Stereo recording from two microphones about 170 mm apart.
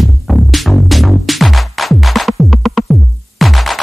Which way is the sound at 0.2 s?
Centre (ahead or behind).